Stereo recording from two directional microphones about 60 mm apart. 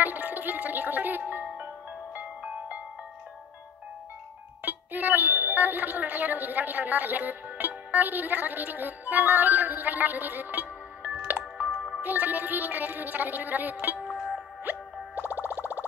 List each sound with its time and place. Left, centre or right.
0.0 s music: right
4.6 s speech: right
11.2 s music: right
12.0 s speech: right
14.1 s music: centre
15.1 s music: right